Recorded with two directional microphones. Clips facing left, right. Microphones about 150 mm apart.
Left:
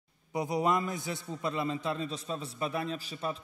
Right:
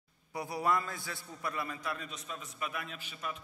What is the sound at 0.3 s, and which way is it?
A man's voice, 20° left (ahead or behind).